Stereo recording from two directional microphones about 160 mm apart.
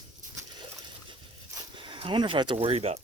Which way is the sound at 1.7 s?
30° right (ahead or behind).